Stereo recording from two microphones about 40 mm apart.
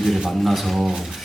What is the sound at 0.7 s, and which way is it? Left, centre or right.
Speech, centre.